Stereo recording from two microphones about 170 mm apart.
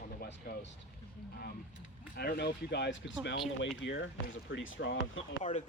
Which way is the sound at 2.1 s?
70° left (ahead or behind).